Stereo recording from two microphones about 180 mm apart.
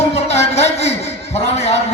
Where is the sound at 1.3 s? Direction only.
35° left (ahead or behind).